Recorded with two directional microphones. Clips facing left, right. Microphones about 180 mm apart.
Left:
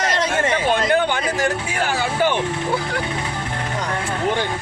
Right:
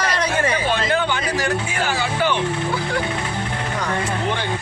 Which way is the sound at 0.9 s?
50° left (ahead or behind).